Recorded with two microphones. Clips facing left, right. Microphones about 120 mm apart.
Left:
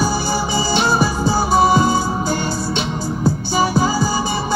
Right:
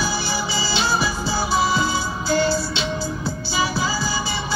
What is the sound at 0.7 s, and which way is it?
Music, 50° left (ahead or behind).